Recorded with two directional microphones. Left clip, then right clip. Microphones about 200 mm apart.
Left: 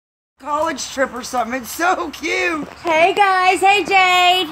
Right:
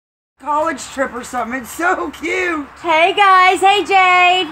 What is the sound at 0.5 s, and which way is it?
Speech, 20° left (ahead or behind).